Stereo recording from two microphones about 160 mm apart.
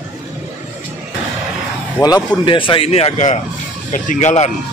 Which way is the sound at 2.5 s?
30° left (ahead or behind).